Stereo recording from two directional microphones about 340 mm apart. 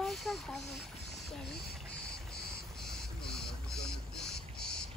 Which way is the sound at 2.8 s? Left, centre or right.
Centre.